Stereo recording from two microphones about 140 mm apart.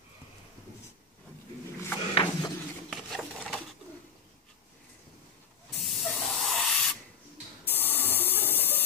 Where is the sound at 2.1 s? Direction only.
35° left (ahead or behind).